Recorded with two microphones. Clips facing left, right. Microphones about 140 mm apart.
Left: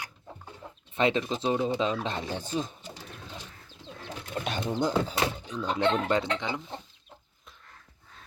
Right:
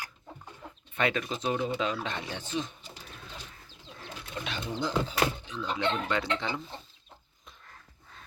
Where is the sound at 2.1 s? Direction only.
35° left (ahead or behind).